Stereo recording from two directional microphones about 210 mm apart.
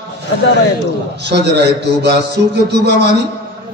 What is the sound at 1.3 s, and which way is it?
A man's voice, 50° right (ahead or behind).